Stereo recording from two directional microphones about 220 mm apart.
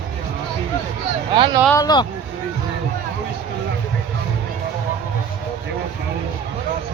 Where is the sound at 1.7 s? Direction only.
20° left (ahead or behind).